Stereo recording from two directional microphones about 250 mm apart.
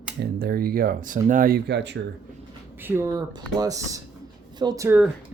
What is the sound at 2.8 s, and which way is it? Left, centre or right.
Speech, centre.